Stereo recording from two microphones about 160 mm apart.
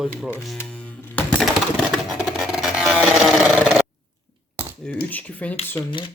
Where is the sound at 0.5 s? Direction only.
10° left (ahead or behind).